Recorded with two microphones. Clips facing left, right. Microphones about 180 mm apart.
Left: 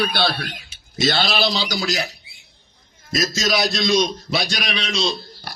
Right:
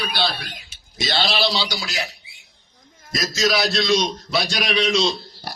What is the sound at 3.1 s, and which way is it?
Speech, 25° left (ahead or behind).